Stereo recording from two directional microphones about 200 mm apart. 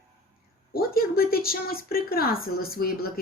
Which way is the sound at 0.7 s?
50° left (ahead or behind).